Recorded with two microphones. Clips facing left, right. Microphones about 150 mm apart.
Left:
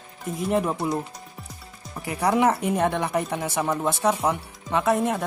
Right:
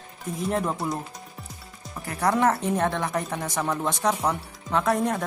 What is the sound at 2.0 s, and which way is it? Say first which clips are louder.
Speech: left 2 dB; 10° left (ahead or behind).